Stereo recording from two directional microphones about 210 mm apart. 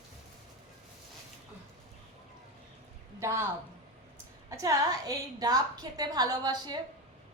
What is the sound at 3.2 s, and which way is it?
Speech, 15° right (ahead or behind).